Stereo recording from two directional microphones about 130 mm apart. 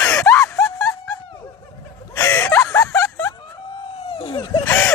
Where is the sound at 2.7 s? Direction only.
25° left (ahead or behind).